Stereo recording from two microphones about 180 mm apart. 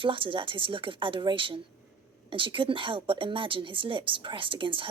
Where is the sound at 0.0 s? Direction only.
30° right (ahead or behind).